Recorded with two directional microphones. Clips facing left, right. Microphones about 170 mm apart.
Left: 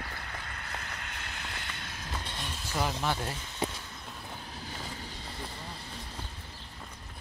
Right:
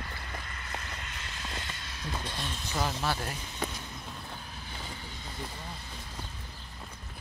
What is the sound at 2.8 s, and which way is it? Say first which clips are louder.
Speech: left 1 dB; 15° left (ahead or behind).